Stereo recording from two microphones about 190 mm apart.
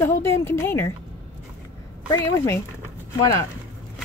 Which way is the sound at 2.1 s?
15° left (ahead or behind).